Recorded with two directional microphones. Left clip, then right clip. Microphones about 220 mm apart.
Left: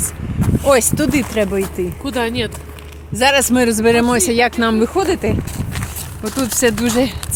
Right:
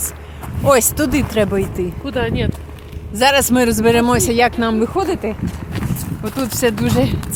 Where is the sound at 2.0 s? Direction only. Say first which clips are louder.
Left 1 dB; 55° left (ahead or behind).